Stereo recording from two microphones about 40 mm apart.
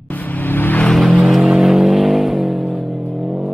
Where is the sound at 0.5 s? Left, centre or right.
Left.